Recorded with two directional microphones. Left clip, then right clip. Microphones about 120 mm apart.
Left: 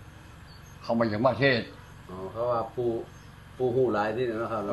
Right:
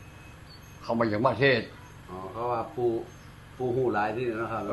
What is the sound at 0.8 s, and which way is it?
Speech, 10° right (ahead or behind).